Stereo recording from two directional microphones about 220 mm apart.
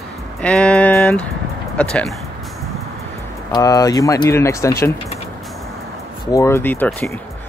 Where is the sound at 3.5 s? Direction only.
15° left (ahead or behind).